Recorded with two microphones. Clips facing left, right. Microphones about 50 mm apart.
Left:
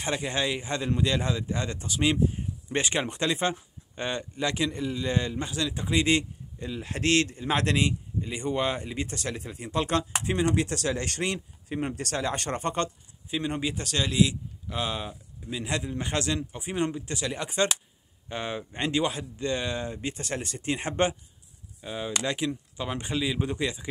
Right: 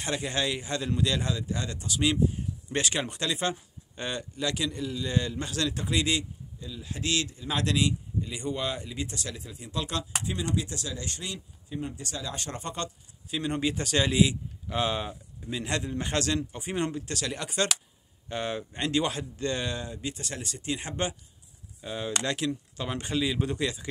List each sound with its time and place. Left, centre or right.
0.0 s speech: centre
6.6 s a man's voice: left
13.3 s a man's voice: centre
19.8 s a man's voice: left
21.8 s speech: centre